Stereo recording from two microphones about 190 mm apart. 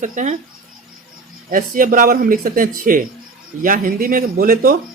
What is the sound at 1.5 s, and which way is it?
Speech, 45° right (ahead or behind).